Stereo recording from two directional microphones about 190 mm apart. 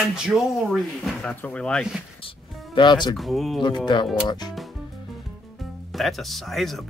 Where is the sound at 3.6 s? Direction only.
25° left (ahead or behind).